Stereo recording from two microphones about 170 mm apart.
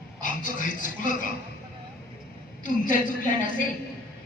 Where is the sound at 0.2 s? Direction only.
50° left (ahead or behind).